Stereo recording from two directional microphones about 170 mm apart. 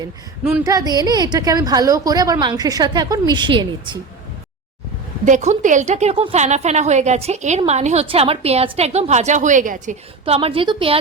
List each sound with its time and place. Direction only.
0.6 s a woman's voice: 20° right (ahead or behind)
5.2 s a woman's voice: 45° right (ahead or behind)